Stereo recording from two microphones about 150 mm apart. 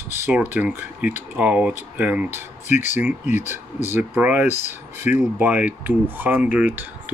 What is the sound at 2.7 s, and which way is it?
Speech, 55° left (ahead or behind).